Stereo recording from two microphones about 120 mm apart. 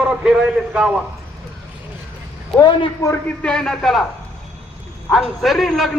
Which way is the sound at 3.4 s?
5° left (ahead or behind).